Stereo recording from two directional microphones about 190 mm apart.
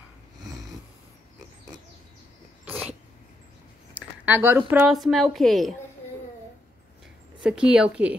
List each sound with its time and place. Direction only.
0.4 s a sound: 20° right (ahead or behind)
2.6 s cat: 10° right (ahead or behind)
4.3 s a woman's voice: 10° right (ahead or behind)
7.4 s a woman's voice: 5° right (ahead or behind)